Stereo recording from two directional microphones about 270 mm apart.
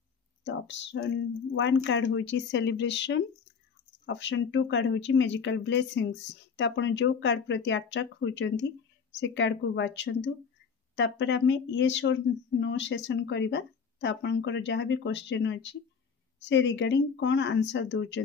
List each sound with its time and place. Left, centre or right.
0.4 s speech: left